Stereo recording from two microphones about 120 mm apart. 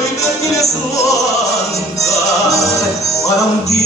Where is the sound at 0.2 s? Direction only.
25° left (ahead or behind).